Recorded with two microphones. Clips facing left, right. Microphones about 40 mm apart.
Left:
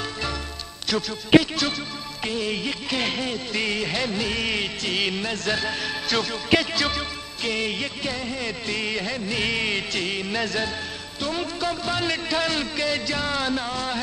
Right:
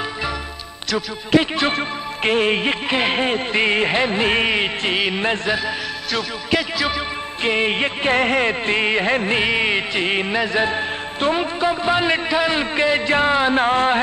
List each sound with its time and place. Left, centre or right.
1.4 s speech: right
6.1 s speech: centre
7.4 s speech: right
8.2 s speech: right
9.4 s a man's voice: right